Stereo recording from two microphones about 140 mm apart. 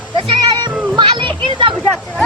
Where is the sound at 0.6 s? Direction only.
35° right (ahead or behind).